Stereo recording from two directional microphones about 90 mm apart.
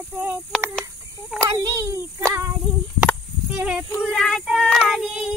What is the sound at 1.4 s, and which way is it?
A child's voice, 35° right (ahead or behind).